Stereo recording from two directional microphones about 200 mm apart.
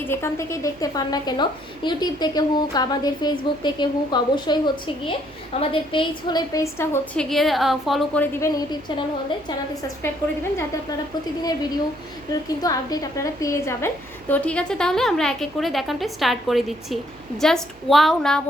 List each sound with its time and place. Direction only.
0.1 s a woman's voice: 15° left (ahead or behind)
12.3 s a woman's voice: 20° left (ahead or behind); by 18.4 s centre (ahead or behind)